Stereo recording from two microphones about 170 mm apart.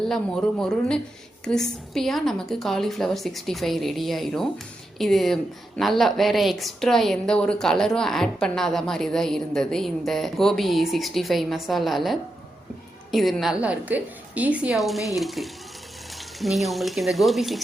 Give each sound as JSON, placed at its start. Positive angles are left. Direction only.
{"t": 0.1, "sound": "a woman's voice", "side_deg": 5}